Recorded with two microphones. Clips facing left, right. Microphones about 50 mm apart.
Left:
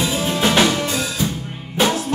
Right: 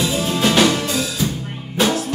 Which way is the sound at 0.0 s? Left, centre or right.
Left.